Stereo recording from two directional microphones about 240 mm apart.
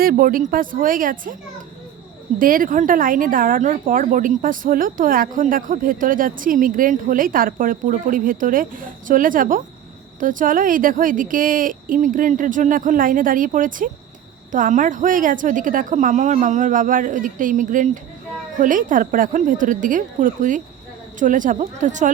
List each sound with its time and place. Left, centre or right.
0.0 s speech: right
2.4 s speech: right